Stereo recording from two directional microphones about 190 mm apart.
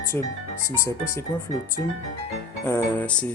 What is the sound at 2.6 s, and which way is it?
Speech, 10° left (ahead or behind).